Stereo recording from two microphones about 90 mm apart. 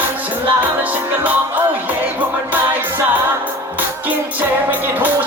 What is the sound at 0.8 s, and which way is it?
Music, 20° right (ahead or behind).